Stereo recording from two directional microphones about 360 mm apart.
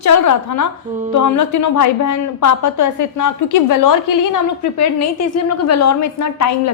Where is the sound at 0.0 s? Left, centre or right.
Left.